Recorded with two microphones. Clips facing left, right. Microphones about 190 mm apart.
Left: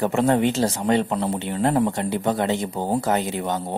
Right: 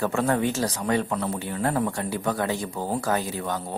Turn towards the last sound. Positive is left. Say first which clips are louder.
# left 4 dB
turn(degrees=20)  # may be behind; listen again after turning